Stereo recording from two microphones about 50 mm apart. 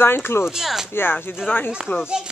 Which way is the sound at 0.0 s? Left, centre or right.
Left.